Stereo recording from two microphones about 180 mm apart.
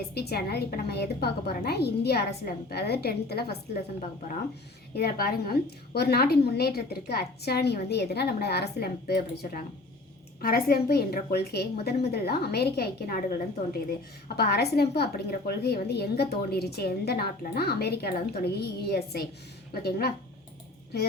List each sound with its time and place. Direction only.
0.0 s a woman's voice: 60° left (ahead or behind)
4.9 s a woman's voice: 55° left (ahead or behind)
14.3 s a woman's voice: 60° left (ahead or behind)